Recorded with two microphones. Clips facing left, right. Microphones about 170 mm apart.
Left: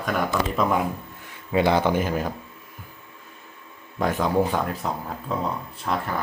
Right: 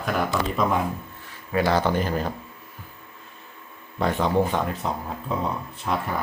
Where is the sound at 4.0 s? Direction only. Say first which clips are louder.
Even; centre (ahead or behind).